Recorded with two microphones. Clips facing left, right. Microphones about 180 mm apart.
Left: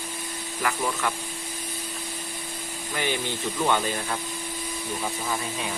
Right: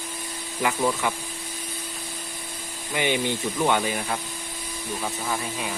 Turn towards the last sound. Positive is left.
turn(degrees=-10)  # may be behind; listen again after turning